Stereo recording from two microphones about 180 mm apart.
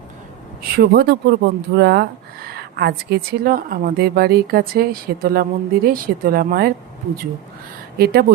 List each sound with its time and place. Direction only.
0.8 s speech: 60° right (ahead or behind)
7.9 s speech: 60° right (ahead or behind)